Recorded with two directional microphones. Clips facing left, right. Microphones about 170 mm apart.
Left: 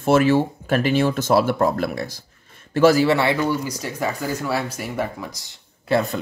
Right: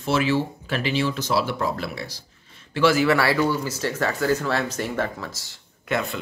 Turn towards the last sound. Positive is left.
turn(degrees=35)  # may be behind; listen again after turning